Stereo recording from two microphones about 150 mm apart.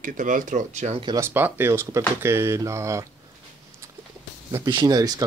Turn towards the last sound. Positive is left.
turn(degrees=-25)  # may be behind; listen again after turning